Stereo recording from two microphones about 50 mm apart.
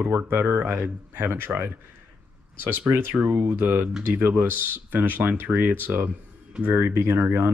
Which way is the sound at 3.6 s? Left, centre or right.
Right.